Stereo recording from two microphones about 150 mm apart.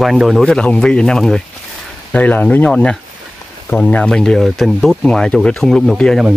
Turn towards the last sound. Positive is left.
turn(degrees=0)  # may be behind; listen again after turning